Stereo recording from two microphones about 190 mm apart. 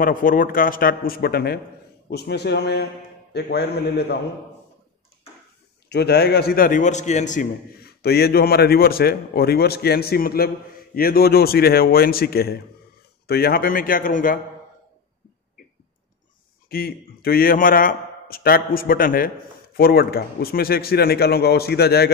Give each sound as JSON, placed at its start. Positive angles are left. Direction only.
{"t": 0.0, "sound": "a man's voice", "side_deg": 45}
{"t": 5.9, "sound": "a man's voice", "side_deg": 60}
{"t": 7.8, "sound": "a man's voice", "side_deg": 55}
{"t": 16.6, "sound": "a man's voice", "side_deg": 55}